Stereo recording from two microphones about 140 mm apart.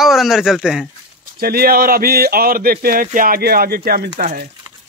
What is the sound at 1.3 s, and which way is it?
Speech, 90° right.